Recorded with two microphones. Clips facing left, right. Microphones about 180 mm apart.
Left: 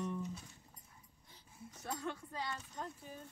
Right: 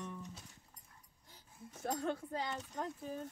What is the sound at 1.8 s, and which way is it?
Speech, 50° right (ahead or behind).